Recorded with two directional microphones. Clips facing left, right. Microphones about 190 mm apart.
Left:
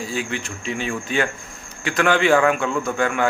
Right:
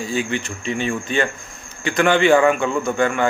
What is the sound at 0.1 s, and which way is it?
A man's voice, centre (ahead or behind).